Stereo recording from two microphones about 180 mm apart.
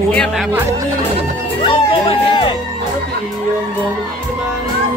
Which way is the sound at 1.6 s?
30° left (ahead or behind).